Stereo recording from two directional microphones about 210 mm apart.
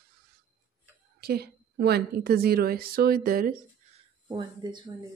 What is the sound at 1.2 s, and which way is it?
A woman's voice, 50° right (ahead or behind).